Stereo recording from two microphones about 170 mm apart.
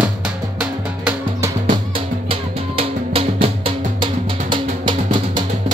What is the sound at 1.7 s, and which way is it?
Music, 30° right (ahead or behind).